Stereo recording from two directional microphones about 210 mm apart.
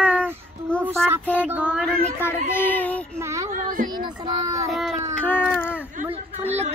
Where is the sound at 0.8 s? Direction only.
10° right (ahead or behind).